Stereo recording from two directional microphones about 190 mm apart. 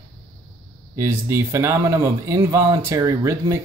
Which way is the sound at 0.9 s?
15° right (ahead or behind).